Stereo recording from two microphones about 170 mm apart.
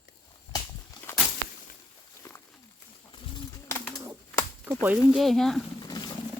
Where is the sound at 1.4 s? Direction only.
90° right.